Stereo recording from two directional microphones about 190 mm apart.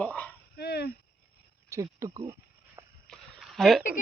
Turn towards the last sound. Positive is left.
turn(degrees=0)  # may be behind; listen again after turning